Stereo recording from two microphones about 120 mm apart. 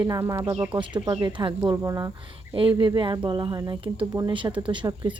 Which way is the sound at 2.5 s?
45° right (ahead or behind).